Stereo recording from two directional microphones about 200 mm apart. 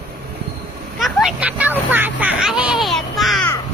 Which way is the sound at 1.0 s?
Centre (ahead or behind).